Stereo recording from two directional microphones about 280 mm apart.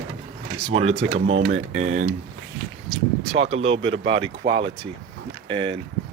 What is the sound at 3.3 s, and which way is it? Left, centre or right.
Speech, right.